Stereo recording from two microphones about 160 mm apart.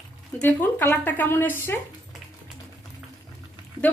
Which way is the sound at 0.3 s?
10° left (ahead or behind).